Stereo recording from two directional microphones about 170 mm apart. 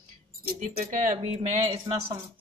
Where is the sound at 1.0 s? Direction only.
40° right (ahead or behind).